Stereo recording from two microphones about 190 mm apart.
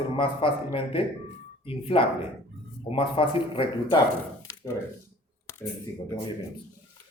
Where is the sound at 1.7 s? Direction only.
30° left (ahead or behind).